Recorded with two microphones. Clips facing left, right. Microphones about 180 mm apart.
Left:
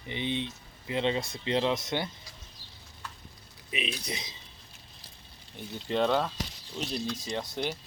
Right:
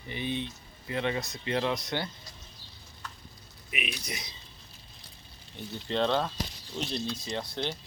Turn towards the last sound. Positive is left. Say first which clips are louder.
# left 1 dB
turn(degrees=15)  # may be behind; listen again after turning